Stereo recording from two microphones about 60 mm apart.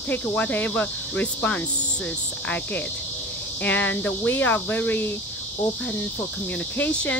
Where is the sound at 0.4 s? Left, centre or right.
Left.